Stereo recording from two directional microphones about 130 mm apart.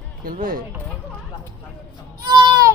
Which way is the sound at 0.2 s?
90° right.